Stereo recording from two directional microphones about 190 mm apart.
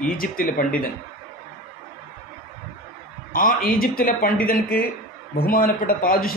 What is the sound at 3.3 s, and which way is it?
Speech, 50° left (ahead or behind).